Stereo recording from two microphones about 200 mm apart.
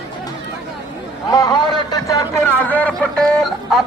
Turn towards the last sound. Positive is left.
turn(degrees=0)  # may be behind; listen again after turning